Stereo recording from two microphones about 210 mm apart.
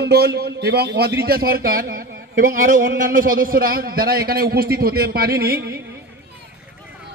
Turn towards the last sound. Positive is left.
turn(degrees=-45)  # may be behind; listen again after turning